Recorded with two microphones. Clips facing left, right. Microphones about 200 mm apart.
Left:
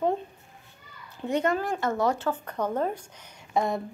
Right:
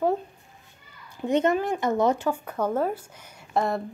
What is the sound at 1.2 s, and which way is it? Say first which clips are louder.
A woman's voice: right 3 dB; 20° right (ahead or behind).